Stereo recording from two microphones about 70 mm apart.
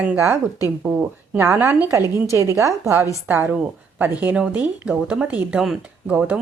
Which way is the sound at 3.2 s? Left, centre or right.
Right.